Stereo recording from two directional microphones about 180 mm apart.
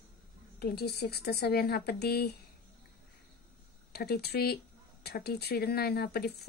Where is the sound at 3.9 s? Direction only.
60° left (ahead or behind).